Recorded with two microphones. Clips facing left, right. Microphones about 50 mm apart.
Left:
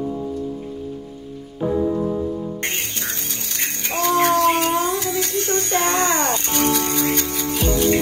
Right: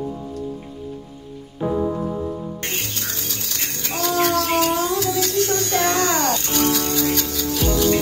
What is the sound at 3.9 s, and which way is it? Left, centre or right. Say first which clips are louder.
Music: left 3 dB; left.